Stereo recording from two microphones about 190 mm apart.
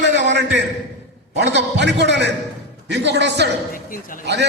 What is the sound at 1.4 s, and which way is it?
A man's voice, 65° right (ahead or behind).